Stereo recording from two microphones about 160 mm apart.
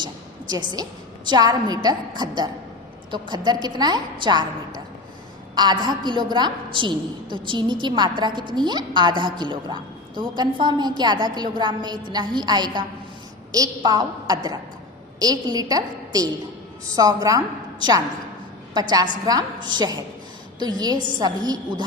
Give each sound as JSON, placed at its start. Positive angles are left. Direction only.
{"t": 0.0, "sound": "a woman's voice", "side_deg": -25}